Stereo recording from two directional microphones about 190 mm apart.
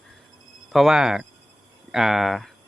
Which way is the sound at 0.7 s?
Centre (ahead or behind).